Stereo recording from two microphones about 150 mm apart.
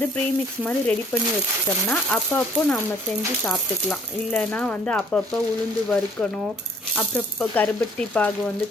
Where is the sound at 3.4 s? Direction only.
5° left (ahead or behind).